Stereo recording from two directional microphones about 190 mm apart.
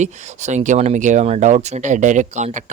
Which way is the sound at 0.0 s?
35° right (ahead or behind).